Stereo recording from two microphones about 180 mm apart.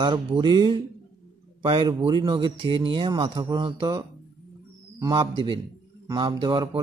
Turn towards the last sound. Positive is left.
turn(degrees=-25)  # may be behind; listen again after turning